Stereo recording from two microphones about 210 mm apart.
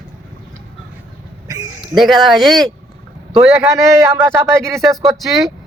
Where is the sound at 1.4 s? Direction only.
15° right (ahead or behind).